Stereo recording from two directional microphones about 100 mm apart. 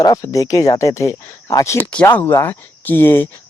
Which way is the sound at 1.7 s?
15° left (ahead or behind).